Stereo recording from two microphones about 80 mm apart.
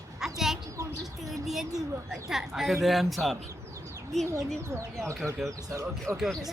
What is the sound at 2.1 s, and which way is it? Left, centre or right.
Speech, centre.